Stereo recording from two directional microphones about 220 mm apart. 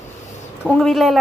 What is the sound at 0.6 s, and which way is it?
Speech, centre (ahead or behind).